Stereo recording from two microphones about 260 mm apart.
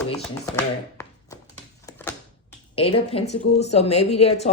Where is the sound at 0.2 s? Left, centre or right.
Centre.